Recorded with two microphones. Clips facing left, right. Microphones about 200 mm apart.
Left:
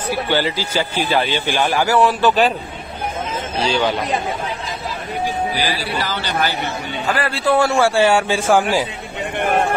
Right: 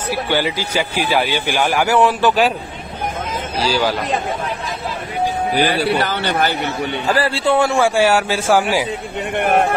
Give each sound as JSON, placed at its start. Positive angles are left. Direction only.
{"t": 0.1, "sound": "a man's voice", "side_deg": -10}
{"t": 3.5, "sound": "a man's voice", "side_deg": -5}
{"t": 5.6, "sound": "speech", "side_deg": -60}
{"t": 7.2, "sound": "a man's voice", "side_deg": -30}
{"t": 7.8, "sound": "a man's voice", "side_deg": -10}